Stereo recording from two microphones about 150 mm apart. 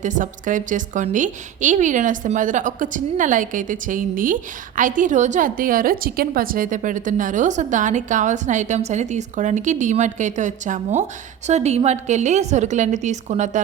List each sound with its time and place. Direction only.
0.0 s a woman's voice: 55° right (ahead or behind)